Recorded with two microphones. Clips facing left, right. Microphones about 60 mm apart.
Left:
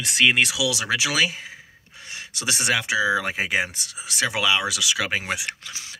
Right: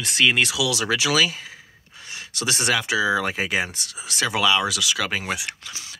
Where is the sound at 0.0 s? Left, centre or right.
Centre.